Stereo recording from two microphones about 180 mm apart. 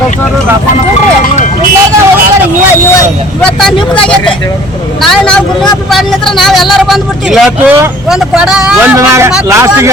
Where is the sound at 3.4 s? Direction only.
5° left (ahead or behind).